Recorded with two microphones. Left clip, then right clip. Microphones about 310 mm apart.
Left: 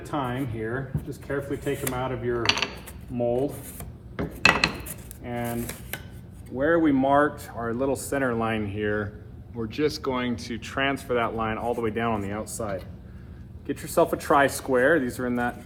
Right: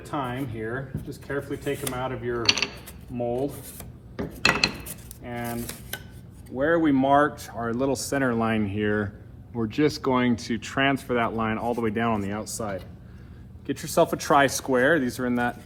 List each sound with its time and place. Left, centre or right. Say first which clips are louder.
0.1 s speech: left 1 dB; centre
4.4 s cutlery: left 2 dB; centre
6.6 s speech: even; centre
7.9 s speech: right 1 dB; right
13.7 s speech: even; centre